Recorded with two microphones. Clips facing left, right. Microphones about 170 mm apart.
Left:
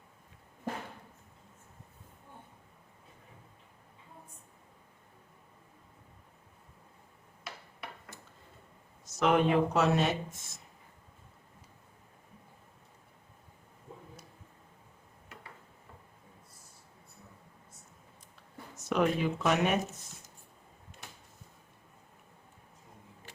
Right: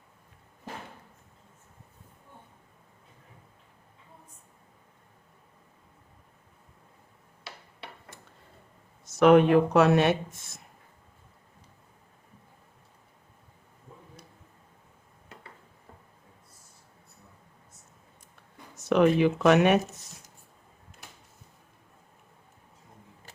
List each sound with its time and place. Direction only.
9.1 s speech: 65° right (ahead or behind)
18.9 s speech: 70° right (ahead or behind)